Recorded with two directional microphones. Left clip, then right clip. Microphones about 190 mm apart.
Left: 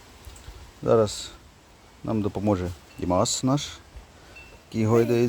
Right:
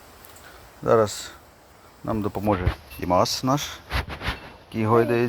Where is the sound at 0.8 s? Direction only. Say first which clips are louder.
Right 2 dB; 10° left (ahead or behind).